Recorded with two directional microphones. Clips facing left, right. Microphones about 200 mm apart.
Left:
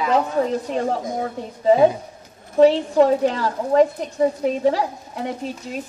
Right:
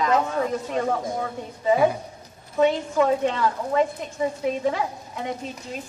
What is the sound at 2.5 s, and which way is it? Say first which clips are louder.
A woman's voice: left 6 dB; 35° left (ahead or behind).